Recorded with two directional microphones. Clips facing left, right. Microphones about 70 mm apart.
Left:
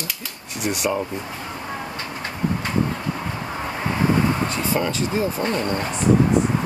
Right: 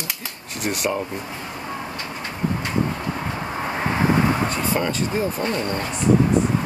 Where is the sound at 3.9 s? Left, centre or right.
Right.